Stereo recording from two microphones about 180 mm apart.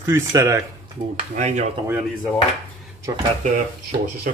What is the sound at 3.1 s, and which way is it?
Speech, 20° right (ahead or behind).